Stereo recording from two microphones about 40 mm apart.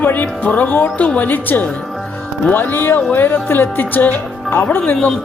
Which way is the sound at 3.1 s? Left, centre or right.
Left.